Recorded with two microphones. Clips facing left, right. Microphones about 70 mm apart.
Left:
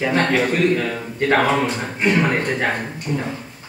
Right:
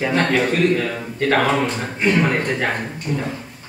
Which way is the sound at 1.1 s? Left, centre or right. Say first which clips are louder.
Even; centre.